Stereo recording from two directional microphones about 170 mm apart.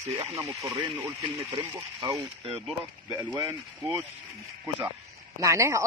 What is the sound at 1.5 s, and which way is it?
Speech, 25° right (ahead or behind).